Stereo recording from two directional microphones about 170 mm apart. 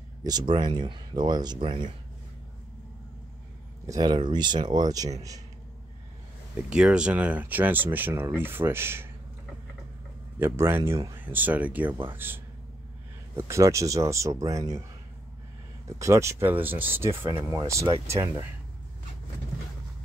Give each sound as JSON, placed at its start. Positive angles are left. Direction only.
{"t": 0.2, "sound": "speech", "side_deg": -25}
{"t": 3.8, "sound": "speech", "side_deg": -20}
{"t": 6.7, "sound": "speech", "side_deg": -5}
{"t": 10.4, "sound": "speech", "side_deg": -15}
{"t": 13.4, "sound": "speech", "side_deg": -15}
{"t": 16.0, "sound": "speech", "side_deg": -15}